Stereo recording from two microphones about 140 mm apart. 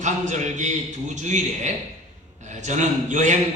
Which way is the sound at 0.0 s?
60° right (ahead or behind).